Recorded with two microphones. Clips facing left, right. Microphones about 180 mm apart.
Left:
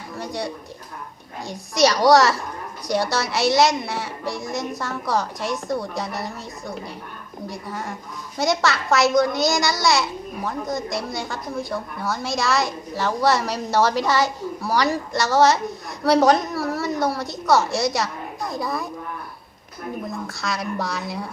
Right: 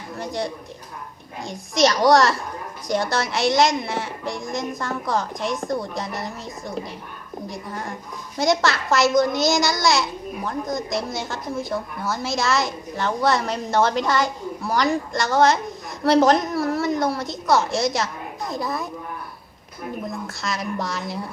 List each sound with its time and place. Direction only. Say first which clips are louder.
0.2 s a child's voice: right 1 dB; centre (ahead or behind)
7.5 s a child's voice: left 2 dB; centre (ahead or behind)
20.1 s a child's voice: left 1 dB; centre (ahead or behind)